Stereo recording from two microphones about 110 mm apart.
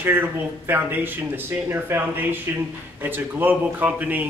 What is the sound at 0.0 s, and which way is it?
A man's voice, 20° right (ahead or behind).